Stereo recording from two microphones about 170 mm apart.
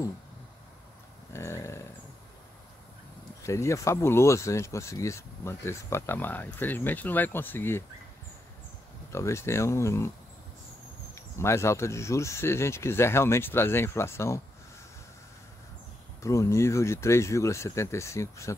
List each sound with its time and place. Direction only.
1.3 s speech: 15° left (ahead or behind)
3.4 s speech: 15° left (ahead or behind)
9.1 s speech: 15° left (ahead or behind)
11.1 s speech: 15° left (ahead or behind)
16.2 s speech: 15° left (ahead or behind)